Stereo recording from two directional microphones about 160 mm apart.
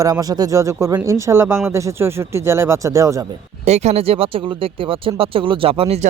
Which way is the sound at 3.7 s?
45° right (ahead or behind).